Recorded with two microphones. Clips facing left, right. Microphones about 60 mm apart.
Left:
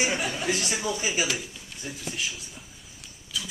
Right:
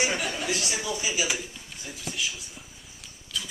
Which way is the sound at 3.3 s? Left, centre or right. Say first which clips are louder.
Even; centre.